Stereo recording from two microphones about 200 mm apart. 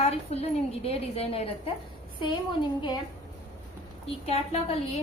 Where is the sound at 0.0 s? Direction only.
30° left (ahead or behind).